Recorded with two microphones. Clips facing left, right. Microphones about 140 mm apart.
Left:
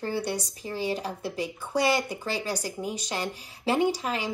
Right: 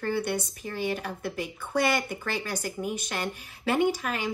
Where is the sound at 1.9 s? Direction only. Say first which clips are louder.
Left 2 dB; 20° left (ahead or behind).